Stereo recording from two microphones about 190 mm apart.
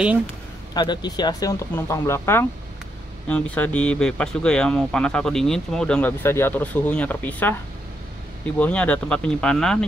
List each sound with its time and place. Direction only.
0.7 s speech: 20° left (ahead or behind)
8.5 s speech: 5° left (ahead or behind)